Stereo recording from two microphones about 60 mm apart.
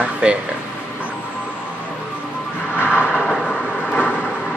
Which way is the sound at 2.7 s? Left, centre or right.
Left.